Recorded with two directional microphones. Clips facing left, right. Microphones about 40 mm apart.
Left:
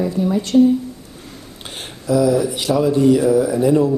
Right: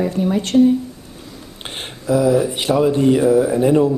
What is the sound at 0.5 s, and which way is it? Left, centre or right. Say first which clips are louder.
Speech: even; centre.